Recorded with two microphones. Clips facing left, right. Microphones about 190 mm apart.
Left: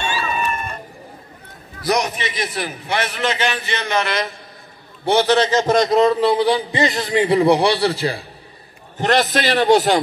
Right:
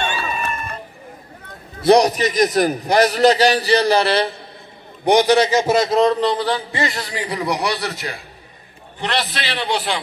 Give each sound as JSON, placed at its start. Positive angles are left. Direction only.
{"t": 1.8, "sound": "a man's voice", "side_deg": -30}
{"t": 5.0, "sound": "a man's voice", "side_deg": -15}
{"t": 8.9, "sound": "a man's voice", "side_deg": 45}